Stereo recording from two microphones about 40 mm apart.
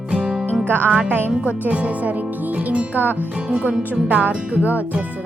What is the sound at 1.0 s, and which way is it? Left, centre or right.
Speech, right.